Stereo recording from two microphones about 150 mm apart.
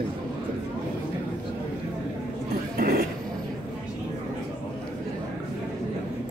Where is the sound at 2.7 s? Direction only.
80° right.